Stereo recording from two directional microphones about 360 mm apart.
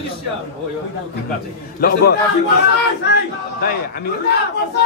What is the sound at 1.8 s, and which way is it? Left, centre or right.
A man's voice, left.